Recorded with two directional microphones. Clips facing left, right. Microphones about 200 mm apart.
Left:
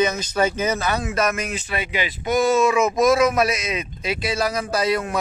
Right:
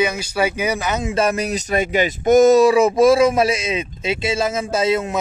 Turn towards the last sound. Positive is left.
turn(degrees=-25)  # may be behind; listen again after turning